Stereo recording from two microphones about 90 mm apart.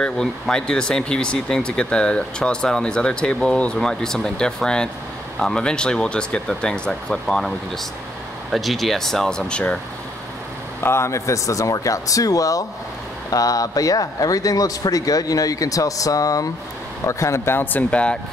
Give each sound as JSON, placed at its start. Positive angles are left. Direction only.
{"t": 0.0, "sound": "speech", "side_deg": 10}
{"t": 10.8, "sound": "speech", "side_deg": 30}